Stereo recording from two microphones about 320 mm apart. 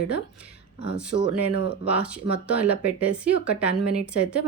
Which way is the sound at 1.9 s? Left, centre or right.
Centre.